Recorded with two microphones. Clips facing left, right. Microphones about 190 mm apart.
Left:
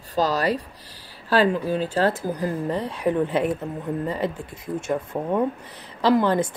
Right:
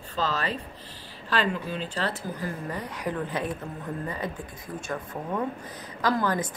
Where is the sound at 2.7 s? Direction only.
30° left (ahead or behind).